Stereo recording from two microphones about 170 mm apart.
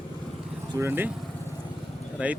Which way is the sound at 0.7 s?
15° right (ahead or behind).